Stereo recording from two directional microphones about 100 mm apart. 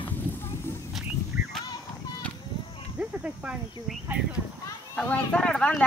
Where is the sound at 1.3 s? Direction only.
15° right (ahead or behind).